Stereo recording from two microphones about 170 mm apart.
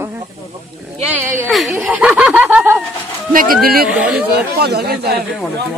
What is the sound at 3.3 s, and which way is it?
Speech, 55° right (ahead or behind).